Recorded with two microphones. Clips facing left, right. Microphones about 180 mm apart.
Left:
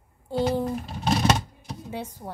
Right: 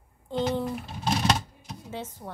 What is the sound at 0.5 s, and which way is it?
Speech, 35° left (ahead or behind).